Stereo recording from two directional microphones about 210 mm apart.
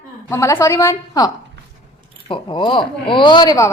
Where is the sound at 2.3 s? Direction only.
25° left (ahead or behind).